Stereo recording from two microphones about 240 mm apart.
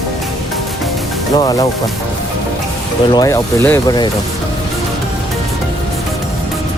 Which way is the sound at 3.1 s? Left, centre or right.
Centre.